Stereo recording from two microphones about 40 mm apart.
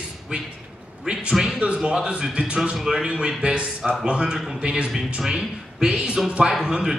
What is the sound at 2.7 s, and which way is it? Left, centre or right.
Speech, centre.